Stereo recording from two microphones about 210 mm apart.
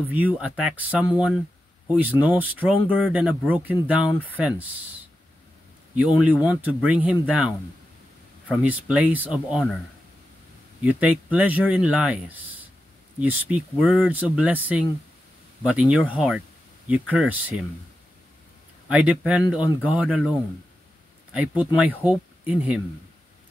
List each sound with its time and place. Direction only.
0.1 s speech: 5° right (ahead or behind)
10.8 s speech: 5° right (ahead or behind)
18.9 s speech: 5° right (ahead or behind)